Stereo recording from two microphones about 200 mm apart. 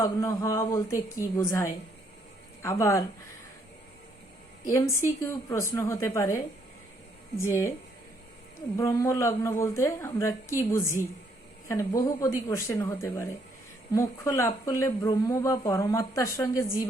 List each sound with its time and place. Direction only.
0.0 s speech: 15° left (ahead or behind)
4.7 s speech: 15° left (ahead or behind)
7.4 s speech: 10° left (ahead or behind)
8.7 s speech: 15° left (ahead or behind)